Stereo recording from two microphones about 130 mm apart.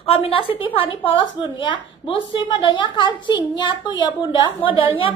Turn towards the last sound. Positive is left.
turn(degrees=40)  # may be behind; listen again after turning